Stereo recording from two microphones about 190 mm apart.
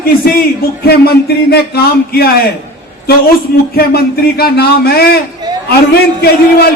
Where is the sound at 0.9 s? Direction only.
55° left (ahead or behind).